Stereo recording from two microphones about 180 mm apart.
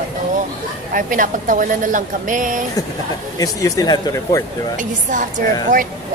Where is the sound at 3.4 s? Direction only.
20° left (ahead or behind).